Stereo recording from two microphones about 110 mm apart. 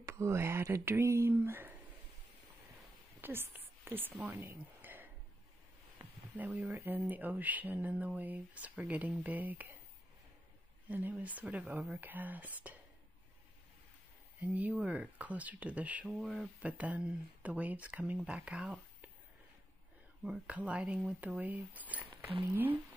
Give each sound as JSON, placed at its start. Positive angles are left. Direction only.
{"t": 0.0, "sound": "speech", "side_deg": -25}
{"t": 3.2, "sound": "a woman's voice", "side_deg": -20}
{"t": 5.9, "sound": "a sound", "side_deg": -15}
{"t": 6.7, "sound": "speech", "side_deg": -25}
{"t": 11.1, "sound": "speech", "side_deg": -15}
{"t": 12.0, "sound": "speech", "side_deg": -15}
{"t": 14.4, "sound": "speech", "side_deg": -15}
{"t": 16.1, "sound": "speech", "side_deg": 0}
{"t": 20.2, "sound": "speech", "side_deg": -10}